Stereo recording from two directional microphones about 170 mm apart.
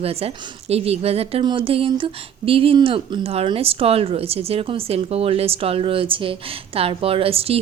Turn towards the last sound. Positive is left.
turn(degrees=-35)  # may be behind; listen again after turning